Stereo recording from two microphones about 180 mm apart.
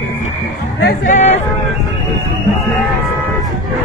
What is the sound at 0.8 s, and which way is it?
Speech, 45° left (ahead or behind).